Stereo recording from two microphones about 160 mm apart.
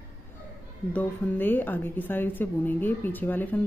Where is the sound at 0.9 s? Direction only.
10° left (ahead or behind).